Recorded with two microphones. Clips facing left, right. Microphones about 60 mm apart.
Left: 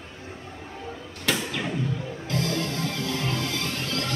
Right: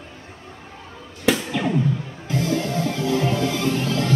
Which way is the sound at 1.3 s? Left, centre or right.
Centre.